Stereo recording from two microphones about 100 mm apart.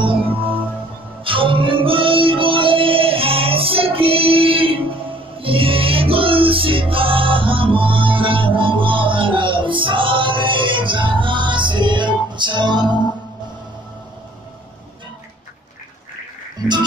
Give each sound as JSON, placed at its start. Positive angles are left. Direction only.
{"t": 0.0, "sound": "music", "side_deg": -65}